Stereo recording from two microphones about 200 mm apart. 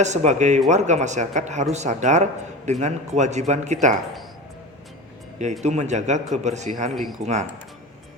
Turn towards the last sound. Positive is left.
turn(degrees=0)  # may be behind; listen again after turning